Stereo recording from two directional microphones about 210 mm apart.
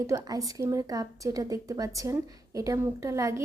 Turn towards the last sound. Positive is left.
turn(degrees=-15)  # may be behind; listen again after turning